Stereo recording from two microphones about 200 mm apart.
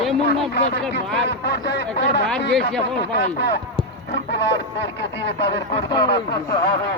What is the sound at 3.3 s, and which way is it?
Speech, 60° left (ahead or behind).